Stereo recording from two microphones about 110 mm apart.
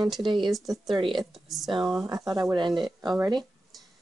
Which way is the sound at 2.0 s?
35° right (ahead or behind).